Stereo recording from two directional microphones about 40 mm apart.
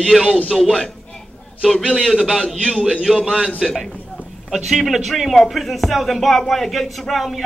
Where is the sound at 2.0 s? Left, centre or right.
Centre.